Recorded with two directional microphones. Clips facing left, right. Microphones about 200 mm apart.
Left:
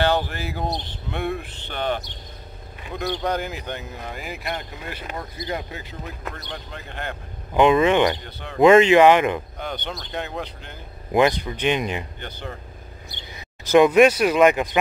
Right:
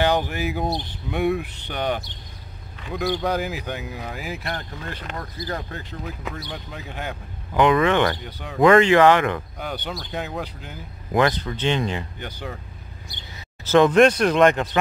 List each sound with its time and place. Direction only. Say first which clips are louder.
0.0 s speech: right 1 dB; 15° right (ahead or behind)
2.9 s speech: right 2 dB; centre (ahead or behind)
4.6 s speech: even; 10° left (ahead or behind); by 7.2 s 5° right (ahead or behind)
7.5 s speech: left 2 dB; 20° left (ahead or behind)
8.2 s speech: right 1 dB; 10° right (ahead or behind)
8.5 s speech: left 2 dB; 20° left (ahead or behind)
9.6 s speech: even; 5° right (ahead or behind)
11.1 s speech: left 2 dB; 15° left (ahead or behind)
12.2 s speech: right 1 dB; 10° right (ahead or behind)
13.7 s speech: left 1 dB; 10° left (ahead or behind)